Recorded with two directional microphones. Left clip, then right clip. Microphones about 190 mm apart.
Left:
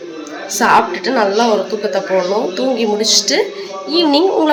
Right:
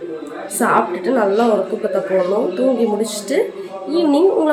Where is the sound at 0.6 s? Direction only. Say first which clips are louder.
Left 4 dB; centre (ahead or behind).